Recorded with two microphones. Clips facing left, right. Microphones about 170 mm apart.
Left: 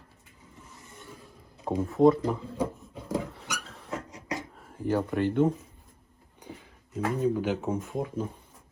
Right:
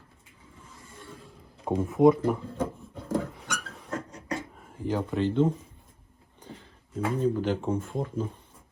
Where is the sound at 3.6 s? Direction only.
5° right (ahead or behind).